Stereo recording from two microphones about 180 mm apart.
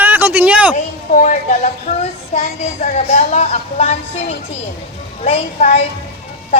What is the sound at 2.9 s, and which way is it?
Speech, 40° left (ahead or behind).